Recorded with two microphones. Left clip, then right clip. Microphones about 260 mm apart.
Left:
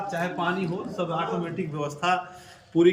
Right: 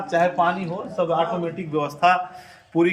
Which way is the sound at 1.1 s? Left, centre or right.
Right.